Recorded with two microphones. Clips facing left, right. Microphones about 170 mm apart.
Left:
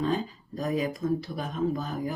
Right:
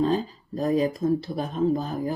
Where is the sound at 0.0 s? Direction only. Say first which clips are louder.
Right 4 dB; 35° right (ahead or behind).